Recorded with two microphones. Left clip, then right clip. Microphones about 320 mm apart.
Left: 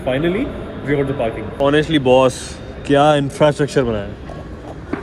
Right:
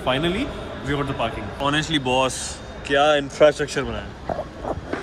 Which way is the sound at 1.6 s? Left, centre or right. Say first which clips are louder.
Left 7 dB; centre.